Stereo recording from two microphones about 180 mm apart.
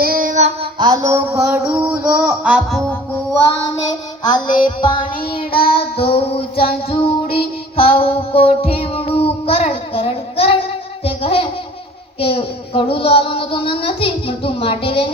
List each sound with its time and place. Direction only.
0.0 s child singing: 55° right (ahead or behind)
0.8 s a sound: 20° right (ahead or behind); by 3.0 s centre (ahead or behind)
4.2 s music: 25° left (ahead or behind)
5.2 s a child's voice: 30° left (ahead or behind)
5.6 s child singing: 35° left (ahead or behind)
11.0 s a sound: 30° left (ahead or behind)
12.2 s a child's voice: 30° left (ahead or behind)